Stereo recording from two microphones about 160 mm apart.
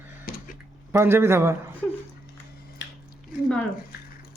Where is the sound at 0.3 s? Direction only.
65° left (ahead or behind).